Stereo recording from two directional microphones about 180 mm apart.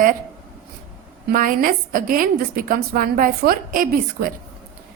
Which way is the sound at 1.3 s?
50° right (ahead or behind).